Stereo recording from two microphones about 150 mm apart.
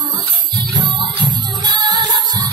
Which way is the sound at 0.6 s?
30° right (ahead or behind).